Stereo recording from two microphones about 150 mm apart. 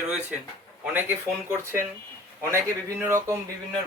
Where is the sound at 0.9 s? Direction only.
15° right (ahead or behind).